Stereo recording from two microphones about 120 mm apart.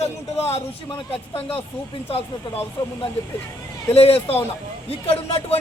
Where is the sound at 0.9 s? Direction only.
50° left (ahead or behind).